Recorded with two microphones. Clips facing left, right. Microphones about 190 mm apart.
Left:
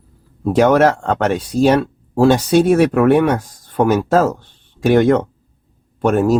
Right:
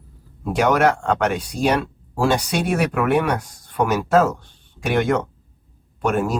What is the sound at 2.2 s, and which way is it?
Speech, 35° left (ahead or behind).